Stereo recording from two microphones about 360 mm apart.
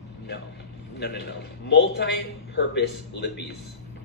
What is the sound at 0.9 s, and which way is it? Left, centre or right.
A man's voice, left.